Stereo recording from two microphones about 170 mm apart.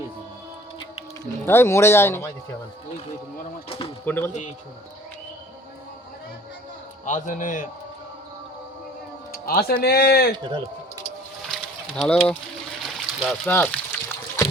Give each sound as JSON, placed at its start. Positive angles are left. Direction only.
{"t": 1.2, "sound": "speech", "side_deg": 15}
{"t": 3.7, "sound": "speech", "side_deg": 35}
{"t": 4.0, "sound": "speech", "side_deg": 10}
{"t": 7.0, "sound": "speech", "side_deg": 45}
{"t": 9.3, "sound": "speech", "side_deg": 60}
{"t": 10.3, "sound": "speech", "side_deg": -30}
{"t": 11.5, "sound": "a sound", "side_deg": 0}
{"t": 12.8, "sound": "trickle", "side_deg": 0}
{"t": 13.5, "sound": "a sound", "side_deg": 10}